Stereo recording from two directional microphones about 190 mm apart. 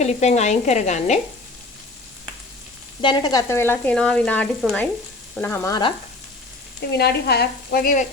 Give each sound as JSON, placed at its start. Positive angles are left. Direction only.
{"t": 0.0, "sound": "sizzle", "side_deg": 35}
{"t": 3.0, "sound": "frying", "side_deg": 25}
{"t": 6.9, "sound": "sizzle", "side_deg": 60}